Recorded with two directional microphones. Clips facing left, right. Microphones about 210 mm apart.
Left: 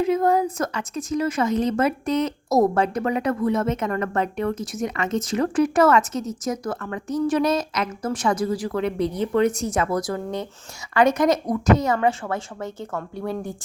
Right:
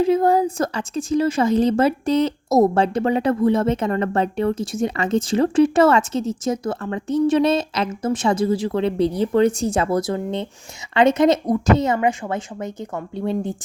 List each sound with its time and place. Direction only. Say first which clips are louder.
0.0 s a woman's voice: right 3 dB; 30° right (ahead or behind)
11.9 s a woman's voice: right 1 dB; 15° right (ahead or behind)